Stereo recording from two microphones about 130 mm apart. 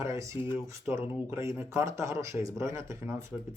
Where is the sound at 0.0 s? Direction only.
25° right (ahead or behind).